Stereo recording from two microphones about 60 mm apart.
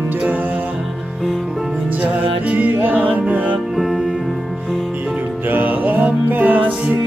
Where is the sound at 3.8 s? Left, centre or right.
Centre.